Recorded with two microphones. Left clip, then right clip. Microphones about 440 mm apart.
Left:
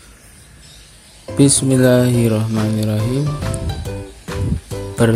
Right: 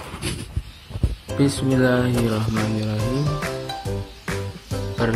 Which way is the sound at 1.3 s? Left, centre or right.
Centre.